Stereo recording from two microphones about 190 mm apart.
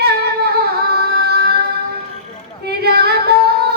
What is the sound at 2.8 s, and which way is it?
Female singing, 55° right (ahead or behind).